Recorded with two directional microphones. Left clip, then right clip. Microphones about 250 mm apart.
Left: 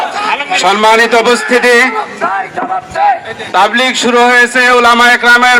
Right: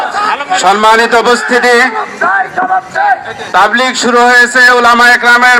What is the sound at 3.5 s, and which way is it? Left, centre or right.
A man's voice, centre.